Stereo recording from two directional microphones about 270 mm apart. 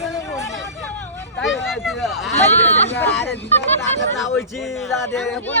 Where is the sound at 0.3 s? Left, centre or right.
Centre.